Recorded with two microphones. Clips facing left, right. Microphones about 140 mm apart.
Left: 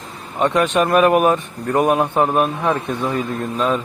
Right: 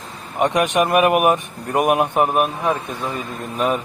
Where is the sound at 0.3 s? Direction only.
15° right (ahead or behind).